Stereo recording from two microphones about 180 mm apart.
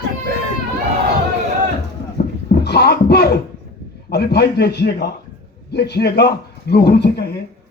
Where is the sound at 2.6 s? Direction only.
65° left (ahead or behind).